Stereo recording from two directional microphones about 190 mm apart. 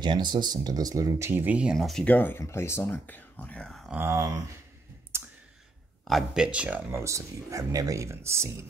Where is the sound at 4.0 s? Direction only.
15° right (ahead or behind).